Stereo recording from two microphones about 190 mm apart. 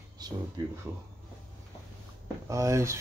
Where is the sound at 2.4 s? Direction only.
15° right (ahead or behind).